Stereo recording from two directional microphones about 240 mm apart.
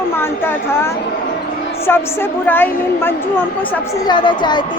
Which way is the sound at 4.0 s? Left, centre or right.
Centre.